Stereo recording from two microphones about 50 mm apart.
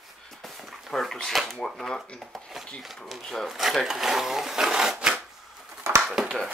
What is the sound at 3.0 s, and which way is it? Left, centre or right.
Speech, centre.